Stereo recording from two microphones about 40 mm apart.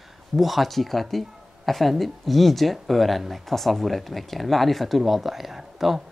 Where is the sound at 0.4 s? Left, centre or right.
Centre.